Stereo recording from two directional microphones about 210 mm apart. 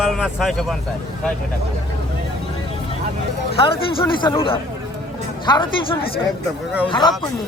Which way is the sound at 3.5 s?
25° left (ahead or behind).